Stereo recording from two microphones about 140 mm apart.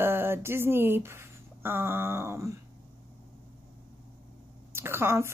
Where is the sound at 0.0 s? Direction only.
15° right (ahead or behind).